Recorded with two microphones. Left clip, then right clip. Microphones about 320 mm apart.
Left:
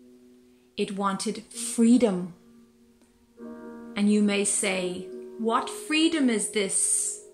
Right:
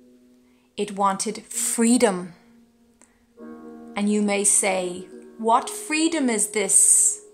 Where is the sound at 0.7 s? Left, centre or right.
Centre.